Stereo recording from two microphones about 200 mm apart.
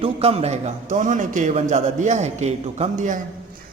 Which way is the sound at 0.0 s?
30° right (ahead or behind).